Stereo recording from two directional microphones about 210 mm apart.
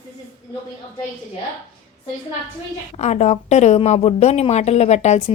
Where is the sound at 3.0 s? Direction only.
30° left (ahead or behind).